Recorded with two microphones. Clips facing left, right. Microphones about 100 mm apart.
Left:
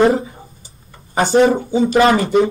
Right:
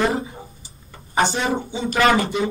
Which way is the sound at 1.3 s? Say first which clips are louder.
Left 11 dB; 40° left (ahead or behind).